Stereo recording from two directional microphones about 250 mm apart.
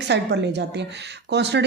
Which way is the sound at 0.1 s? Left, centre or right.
Right.